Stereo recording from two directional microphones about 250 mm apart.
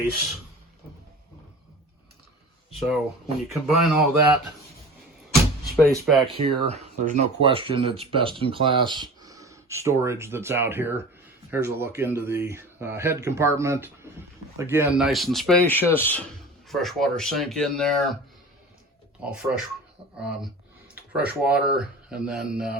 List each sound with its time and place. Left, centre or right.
2.7 s speech: centre
5.3 s a sound: centre
6.1 s speech: centre
6.3 s speech: right; by 18.2 s centre
19.2 s speech: centre
20.1 s a sound: centre
21.5 s speech: centre